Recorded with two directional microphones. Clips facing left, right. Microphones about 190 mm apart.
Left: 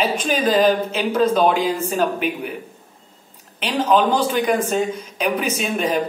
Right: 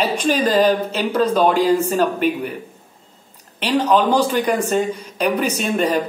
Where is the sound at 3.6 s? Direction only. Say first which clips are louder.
Right 1 dB; centre (ahead or behind).